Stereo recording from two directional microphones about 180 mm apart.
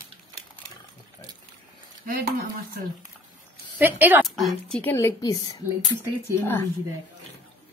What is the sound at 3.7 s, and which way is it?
Speech, 10° right (ahead or behind).